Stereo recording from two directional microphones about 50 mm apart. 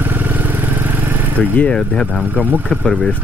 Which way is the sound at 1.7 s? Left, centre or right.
Centre.